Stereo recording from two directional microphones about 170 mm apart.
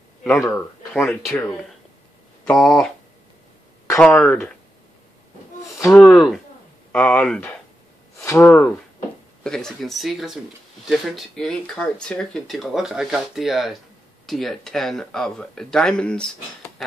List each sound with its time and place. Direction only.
0.2 s speech: 10° left (ahead or behind)
4.0 s speech: 5° left (ahead or behind)
5.8 s a sound: 15° left (ahead or behind)
6.0 s speech: centre (ahead or behind)